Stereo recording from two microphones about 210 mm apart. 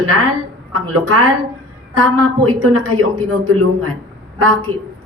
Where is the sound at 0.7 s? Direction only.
85° right.